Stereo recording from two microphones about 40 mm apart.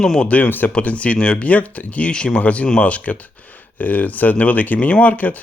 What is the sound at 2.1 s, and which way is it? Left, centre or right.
Speech, left.